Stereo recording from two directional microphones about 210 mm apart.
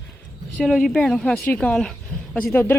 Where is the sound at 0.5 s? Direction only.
Centre (ahead or behind).